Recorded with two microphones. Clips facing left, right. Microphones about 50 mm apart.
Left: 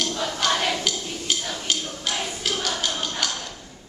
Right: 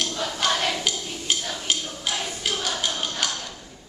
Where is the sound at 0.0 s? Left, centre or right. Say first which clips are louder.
Left 1 dB; centre.